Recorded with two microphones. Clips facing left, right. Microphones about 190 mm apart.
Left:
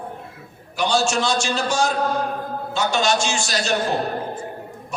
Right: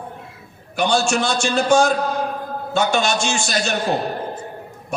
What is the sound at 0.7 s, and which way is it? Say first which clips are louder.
A man's voice: right 2 dB; 55° right (ahead or behind).